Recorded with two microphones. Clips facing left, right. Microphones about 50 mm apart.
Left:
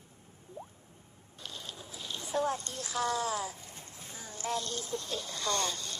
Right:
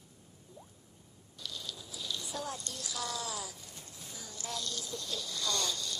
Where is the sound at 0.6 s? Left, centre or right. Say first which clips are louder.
Left 11 dB; left.